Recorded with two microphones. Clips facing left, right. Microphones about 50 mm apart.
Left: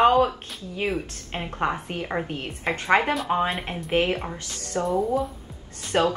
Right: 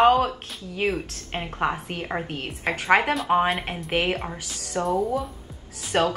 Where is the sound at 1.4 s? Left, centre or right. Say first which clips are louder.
Even; centre.